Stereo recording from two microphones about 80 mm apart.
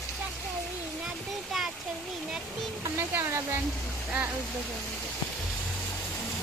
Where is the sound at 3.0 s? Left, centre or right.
Right.